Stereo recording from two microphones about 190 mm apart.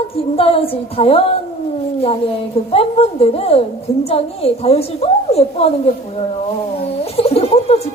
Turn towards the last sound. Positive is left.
turn(degrees=30)  # may be behind; listen again after turning